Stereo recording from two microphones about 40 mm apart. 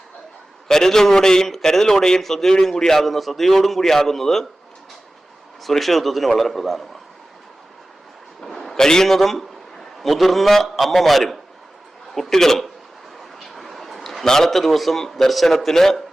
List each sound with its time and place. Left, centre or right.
0.7 s a man's voice: centre
5.6 s a man's voice: centre
8.4 s a man's voice: centre
13.5 s a sound: centre
14.3 s a man's voice: centre